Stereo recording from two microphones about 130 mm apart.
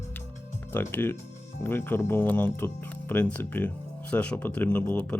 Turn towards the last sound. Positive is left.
turn(degrees=15)  # may be behind; listen again after turning